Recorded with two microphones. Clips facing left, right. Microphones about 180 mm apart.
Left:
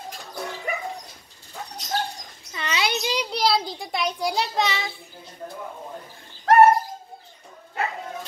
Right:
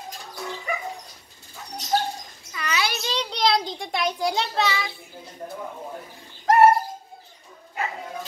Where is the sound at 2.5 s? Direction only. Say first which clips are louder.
Left 1 dB; 25° left (ahead or behind); by 4.5 s centre (ahead or behind).